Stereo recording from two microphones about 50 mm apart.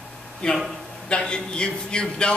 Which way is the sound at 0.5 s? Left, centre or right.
Centre.